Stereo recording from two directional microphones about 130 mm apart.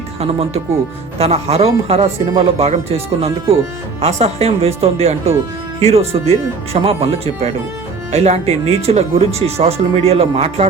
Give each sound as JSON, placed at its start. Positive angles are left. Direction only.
{"t": 0.2, "sound": "speech", "side_deg": -50}